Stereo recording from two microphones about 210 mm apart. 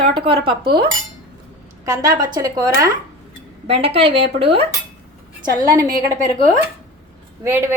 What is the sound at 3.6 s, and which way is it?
Speech, 30° right (ahead or behind).